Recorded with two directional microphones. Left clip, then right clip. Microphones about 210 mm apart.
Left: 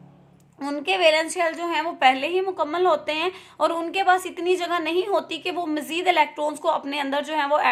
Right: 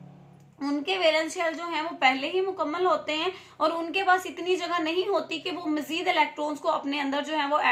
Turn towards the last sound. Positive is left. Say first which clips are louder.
# left 4 dB
turn(degrees=40)  # may be behind; listen again after turning